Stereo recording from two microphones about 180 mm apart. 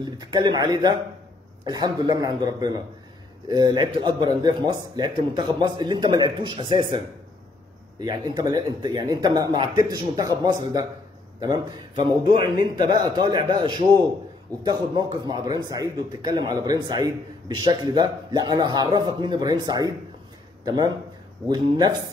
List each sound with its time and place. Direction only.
0.0 s speech: 20° right (ahead or behind)
8.0 s speech: 25° right (ahead or behind)